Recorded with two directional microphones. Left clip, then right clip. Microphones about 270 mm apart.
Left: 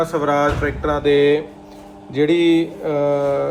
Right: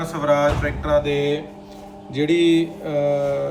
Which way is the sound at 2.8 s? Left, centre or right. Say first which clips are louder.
Left 4 dB; left.